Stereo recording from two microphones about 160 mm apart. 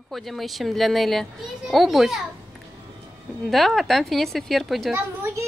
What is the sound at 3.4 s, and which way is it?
A child's voice, centre (ahead or behind).